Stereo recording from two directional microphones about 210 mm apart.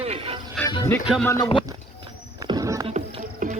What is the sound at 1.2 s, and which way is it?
Speech, 15° left (ahead or behind).